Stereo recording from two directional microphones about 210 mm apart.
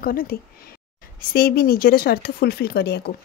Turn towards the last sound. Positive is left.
turn(degrees=50)  # may be behind; listen again after turning